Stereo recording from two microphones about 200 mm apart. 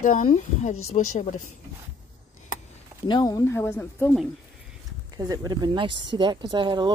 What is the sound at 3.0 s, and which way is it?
Speech, 20° left (ahead or behind).